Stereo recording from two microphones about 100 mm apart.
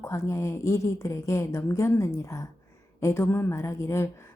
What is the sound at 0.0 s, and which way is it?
A woman's voice, 30° left (ahead or behind).